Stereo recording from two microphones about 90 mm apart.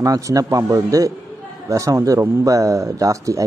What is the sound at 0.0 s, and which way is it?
A man's voice, 40° right (ahead or behind).